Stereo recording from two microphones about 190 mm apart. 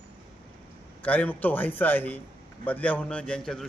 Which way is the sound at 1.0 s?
10° left (ahead or behind).